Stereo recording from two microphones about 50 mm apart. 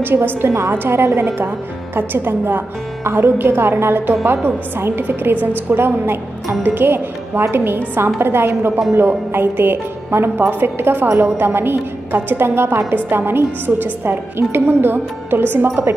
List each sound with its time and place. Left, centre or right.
0.0 s a woman's voice: right
11.1 s a woman's voice: right
11.3 s a woman's voice: right